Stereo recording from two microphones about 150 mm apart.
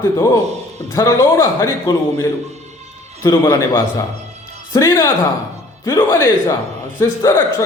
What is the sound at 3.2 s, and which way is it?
A man's voice, 25° left (ahead or behind).